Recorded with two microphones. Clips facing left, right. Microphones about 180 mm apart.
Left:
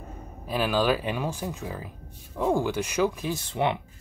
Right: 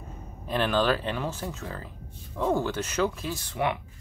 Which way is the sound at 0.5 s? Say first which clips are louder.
Left 1 dB; 5° left (ahead or behind).